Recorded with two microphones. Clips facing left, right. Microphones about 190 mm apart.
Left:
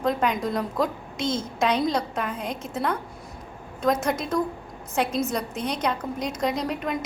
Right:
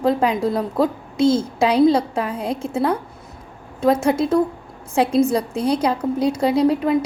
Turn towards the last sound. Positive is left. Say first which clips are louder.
# right 10 dB
turn(degrees=-30)  # may be behind; listen again after turning